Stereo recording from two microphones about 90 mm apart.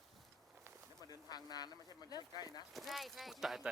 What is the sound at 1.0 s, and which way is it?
Speech, 45° left (ahead or behind).